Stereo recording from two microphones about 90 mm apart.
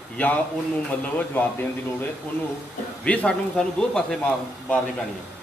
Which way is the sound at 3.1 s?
15° left (ahead or behind).